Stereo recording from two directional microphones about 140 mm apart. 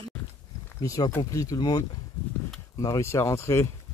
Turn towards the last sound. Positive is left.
turn(degrees=20)  # may be behind; listen again after turning